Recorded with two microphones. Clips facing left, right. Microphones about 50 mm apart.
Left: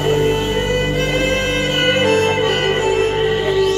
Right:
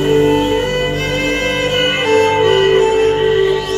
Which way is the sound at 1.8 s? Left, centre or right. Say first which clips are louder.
Right 2 dB; right.